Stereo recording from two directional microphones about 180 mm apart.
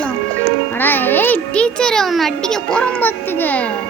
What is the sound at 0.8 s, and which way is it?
A child's voice, 10° left (ahead or behind).